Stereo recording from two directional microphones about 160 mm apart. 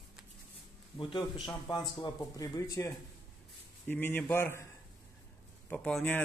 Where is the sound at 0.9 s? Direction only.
30° left (ahead or behind).